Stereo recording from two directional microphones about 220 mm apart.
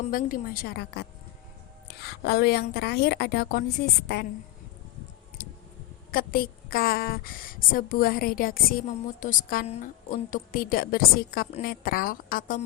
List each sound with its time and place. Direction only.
0.0 s a woman's voice: 40° left (ahead or behind)
5.4 s a sound: 45° left (ahead or behind)
6.1 s a woman's voice: 40° left (ahead or behind)